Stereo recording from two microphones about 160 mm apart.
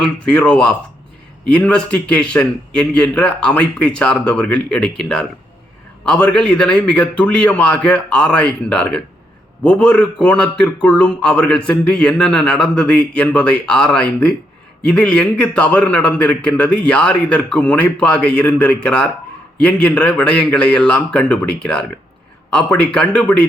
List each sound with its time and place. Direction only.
0.0 s a man's voice: 5° left (ahead or behind)